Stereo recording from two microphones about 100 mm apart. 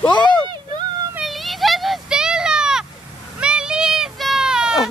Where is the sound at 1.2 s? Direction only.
Centre (ahead or behind).